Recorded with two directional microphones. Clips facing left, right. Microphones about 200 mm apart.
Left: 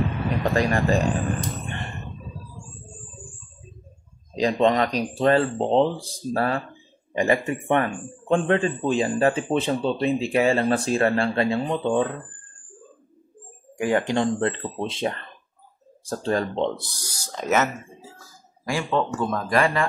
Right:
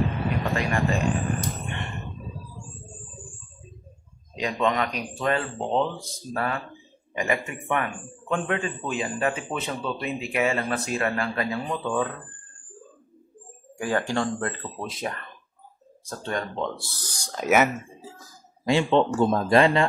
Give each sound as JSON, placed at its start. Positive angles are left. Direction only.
{"t": 0.4, "sound": "a man's voice", "side_deg": 40}
{"t": 1.7, "sound": "a sound", "side_deg": 35}
{"t": 4.4, "sound": "a man's voice", "side_deg": 35}
{"t": 13.7, "sound": "speech", "side_deg": 20}
{"t": 18.7, "sound": "speech", "side_deg": -25}